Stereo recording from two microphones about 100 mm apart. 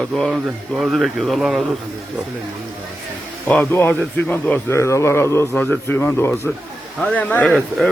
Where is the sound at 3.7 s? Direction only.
20° left (ahead or behind).